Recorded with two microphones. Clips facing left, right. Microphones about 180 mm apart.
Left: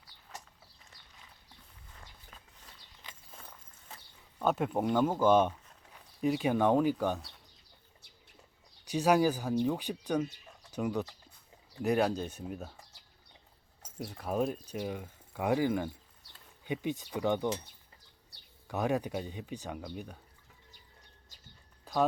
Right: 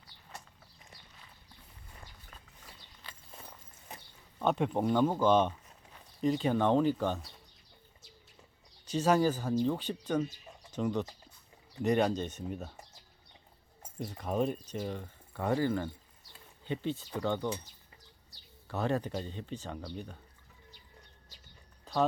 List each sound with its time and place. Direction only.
0.3 s a sound: centre (ahead or behind)
3.9 s a sound: 15° right (ahead or behind)
4.4 s speech: 5° left (ahead or behind)
8.9 s speech: 10° left (ahead or behind)
14.0 s speech: 5° left (ahead or behind)
18.7 s speech: 10° left (ahead or behind)